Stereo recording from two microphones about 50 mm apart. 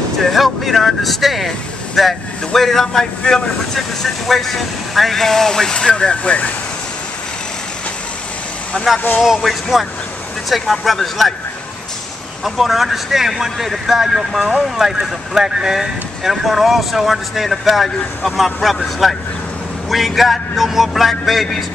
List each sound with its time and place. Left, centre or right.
0.2 s speech: centre; by 6.5 s left
8.7 s speech: left
9.2 s speech: centre
12.4 s speech: centre